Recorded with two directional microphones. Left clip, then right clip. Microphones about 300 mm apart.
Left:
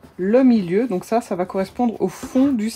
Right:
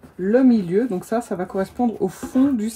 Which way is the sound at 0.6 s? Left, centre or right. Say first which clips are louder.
Left 1 dB; centre.